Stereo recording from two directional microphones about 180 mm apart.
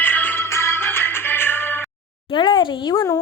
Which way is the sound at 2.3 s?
25° left (ahead or behind).